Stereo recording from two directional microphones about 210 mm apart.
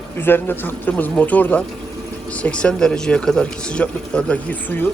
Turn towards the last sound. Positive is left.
turn(degrees=10)  # may be behind; listen again after turning